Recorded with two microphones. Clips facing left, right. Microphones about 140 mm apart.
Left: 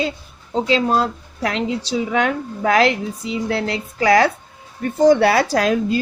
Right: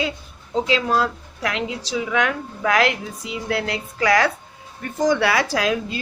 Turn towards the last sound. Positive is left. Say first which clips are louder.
# left 5 dB
turn(degrees=40)  # may be behind; listen again after turning